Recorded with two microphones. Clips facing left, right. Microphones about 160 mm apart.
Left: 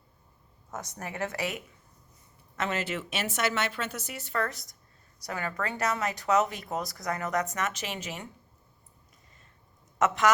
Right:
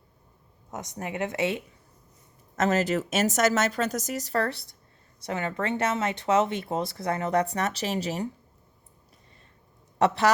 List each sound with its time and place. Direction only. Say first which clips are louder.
0.7 s speech: right 4 dB; 20° right (ahead or behind)
2.6 s speech: right 8 dB; 40° right (ahead or behind)
10.0 s speech: right 2 dB; 35° right (ahead or behind)